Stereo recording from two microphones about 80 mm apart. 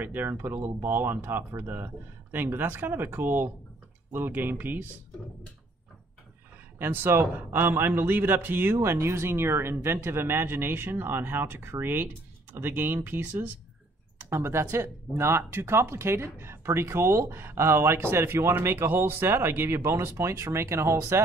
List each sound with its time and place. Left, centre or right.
0.0 s a man's voice: right
6.8 s a man's voice: right